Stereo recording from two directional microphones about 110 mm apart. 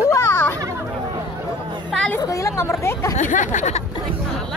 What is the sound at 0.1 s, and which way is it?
Chatter, 25° left (ahead or behind).